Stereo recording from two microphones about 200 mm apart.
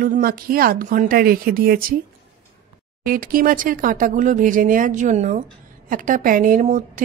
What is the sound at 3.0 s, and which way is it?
Speech, 45° right (ahead or behind).